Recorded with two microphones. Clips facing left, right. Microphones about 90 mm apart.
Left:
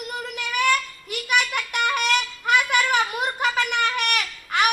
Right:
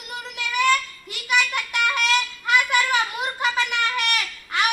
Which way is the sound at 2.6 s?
10° left (ahead or behind).